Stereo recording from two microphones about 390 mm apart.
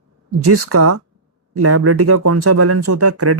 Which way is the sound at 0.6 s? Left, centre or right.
Right.